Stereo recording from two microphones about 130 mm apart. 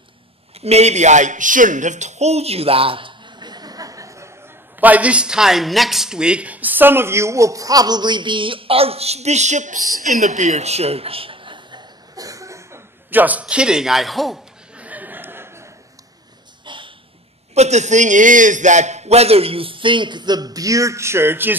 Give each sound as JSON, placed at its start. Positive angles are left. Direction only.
{"t": 0.6, "sound": "speech", "side_deg": -55}
{"t": 4.7, "sound": "speech", "side_deg": -10}
{"t": 16.6, "sound": "a sound", "side_deg": -40}
{"t": 17.6, "sound": "a man's voice", "side_deg": -60}